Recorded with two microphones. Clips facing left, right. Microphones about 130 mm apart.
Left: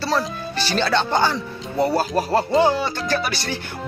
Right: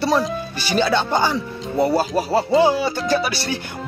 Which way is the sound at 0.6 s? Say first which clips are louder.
Right 1 dB; 10° right (ahead or behind).